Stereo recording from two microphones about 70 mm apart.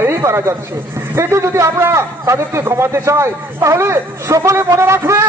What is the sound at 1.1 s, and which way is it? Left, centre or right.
A man's voice, right.